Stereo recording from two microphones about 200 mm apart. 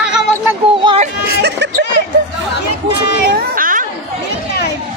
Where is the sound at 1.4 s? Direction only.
60° right (ahead or behind).